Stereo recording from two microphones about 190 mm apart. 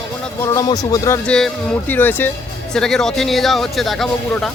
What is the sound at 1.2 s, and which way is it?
Speech, 5° left (ahead or behind).